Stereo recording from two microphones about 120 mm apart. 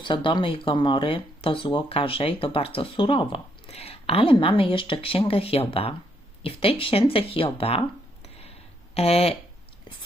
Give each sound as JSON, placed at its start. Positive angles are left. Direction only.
{"t": 0.0, "sound": "speech", "side_deg": 45}